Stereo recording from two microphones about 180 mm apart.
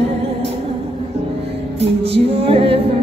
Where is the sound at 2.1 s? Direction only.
30° right (ahead or behind).